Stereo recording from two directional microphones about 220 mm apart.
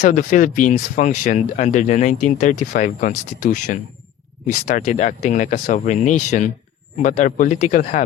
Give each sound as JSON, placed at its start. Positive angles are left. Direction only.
{"t": 0.0, "sound": "speech", "side_deg": 35}